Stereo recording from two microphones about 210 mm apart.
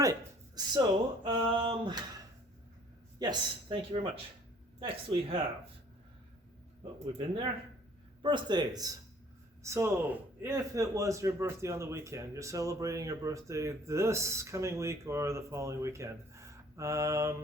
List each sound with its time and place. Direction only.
0.0 s speech: 15° right (ahead or behind)
3.2 s speech: 20° right (ahead or behind)
8.2 s a man's voice: 20° right (ahead or behind)